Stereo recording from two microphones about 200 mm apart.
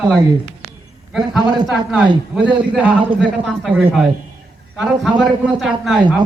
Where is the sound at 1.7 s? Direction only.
5° right (ahead or behind).